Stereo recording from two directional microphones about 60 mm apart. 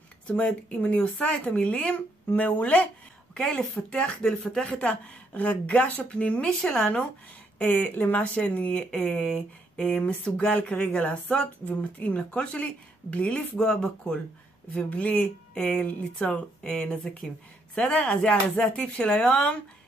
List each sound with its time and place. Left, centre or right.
0.7 s speech: left
3.3 s speech: centre
4.6 s speech: centre
6.6 s speech: centre
7.5 s speech: left
15.5 s speech: centre